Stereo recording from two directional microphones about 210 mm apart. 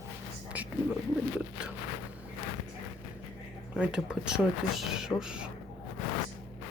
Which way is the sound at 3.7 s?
5° right (ahead or behind).